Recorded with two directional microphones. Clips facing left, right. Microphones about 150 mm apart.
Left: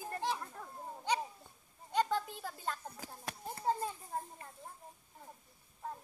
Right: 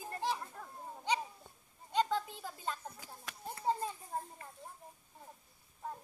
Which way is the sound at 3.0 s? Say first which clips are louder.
Left 3 dB; 40° left (ahead or behind).